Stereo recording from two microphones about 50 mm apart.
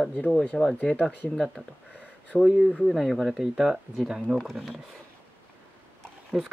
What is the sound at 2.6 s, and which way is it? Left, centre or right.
Speech, centre.